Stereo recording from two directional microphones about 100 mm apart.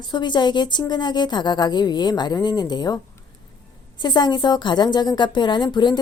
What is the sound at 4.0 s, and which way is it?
Speech, 45° left (ahead or behind).